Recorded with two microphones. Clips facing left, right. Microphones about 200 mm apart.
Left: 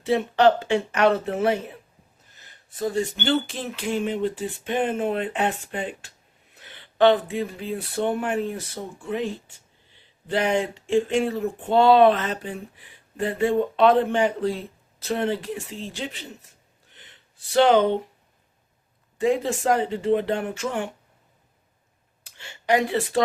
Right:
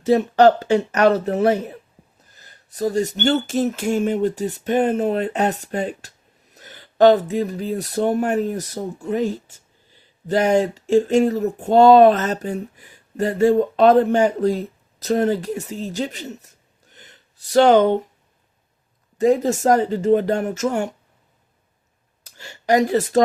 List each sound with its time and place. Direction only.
0.0 s speech: 40° right (ahead or behind)
19.2 s speech: 40° right (ahead or behind)
22.2 s speech: 40° right (ahead or behind)